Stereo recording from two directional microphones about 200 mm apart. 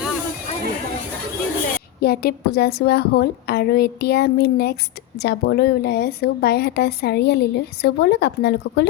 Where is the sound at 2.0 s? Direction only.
50° left (ahead or behind).